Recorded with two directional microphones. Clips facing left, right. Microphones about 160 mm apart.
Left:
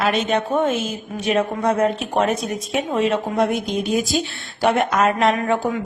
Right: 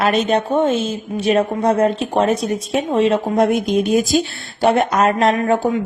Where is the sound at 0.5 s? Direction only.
30° right (ahead or behind).